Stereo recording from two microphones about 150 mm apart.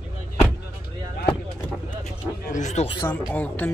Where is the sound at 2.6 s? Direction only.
50° left (ahead or behind).